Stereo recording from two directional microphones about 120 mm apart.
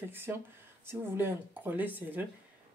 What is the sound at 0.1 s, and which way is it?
Speech, 20° right (ahead or behind).